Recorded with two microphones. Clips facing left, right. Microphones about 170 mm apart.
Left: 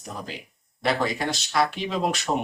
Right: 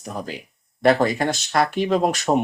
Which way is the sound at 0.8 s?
50° right (ahead or behind).